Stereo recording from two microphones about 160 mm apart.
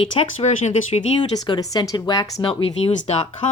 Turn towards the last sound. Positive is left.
turn(degrees=40)  # may be behind; listen again after turning